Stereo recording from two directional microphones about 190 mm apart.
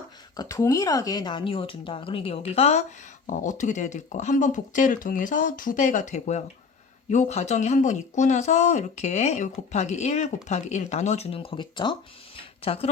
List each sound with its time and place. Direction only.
0.3 s speech: 20° left (ahead or behind)